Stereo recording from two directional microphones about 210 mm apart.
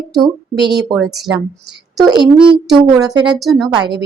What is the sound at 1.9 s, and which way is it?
Speech, 20° right (ahead or behind).